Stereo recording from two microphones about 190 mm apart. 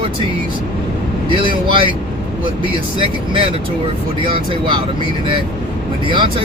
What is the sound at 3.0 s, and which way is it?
Speech, 25° right (ahead or behind).